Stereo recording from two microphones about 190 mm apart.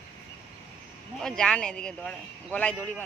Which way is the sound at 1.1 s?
5° left (ahead or behind).